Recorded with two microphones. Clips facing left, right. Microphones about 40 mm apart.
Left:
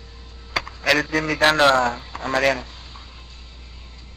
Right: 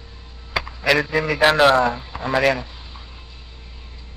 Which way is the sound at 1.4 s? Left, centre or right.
Centre.